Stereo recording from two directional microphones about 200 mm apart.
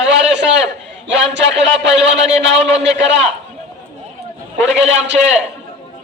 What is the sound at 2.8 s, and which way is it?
Speech, 60° right (ahead or behind).